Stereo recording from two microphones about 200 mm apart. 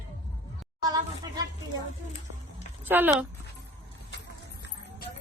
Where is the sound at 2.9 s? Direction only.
10° right (ahead or behind).